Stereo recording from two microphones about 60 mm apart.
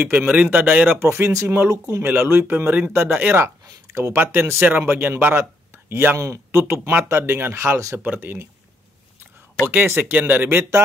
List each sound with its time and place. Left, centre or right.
0.3 s a man's voice: right
0.9 s speech: right
1.3 s speech: right
2.0 s speech: right
3.9 s speech: right
4.2 s speech: right
6.1 s speech: right
6.7 s speech: right
8.0 s speech: right
9.7 s speech: right